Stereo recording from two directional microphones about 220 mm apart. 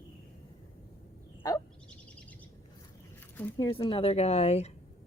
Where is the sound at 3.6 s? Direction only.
25° left (ahead or behind).